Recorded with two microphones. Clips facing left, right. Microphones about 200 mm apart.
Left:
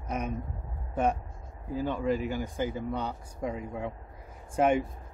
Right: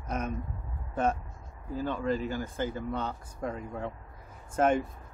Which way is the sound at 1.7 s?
15° left (ahead or behind).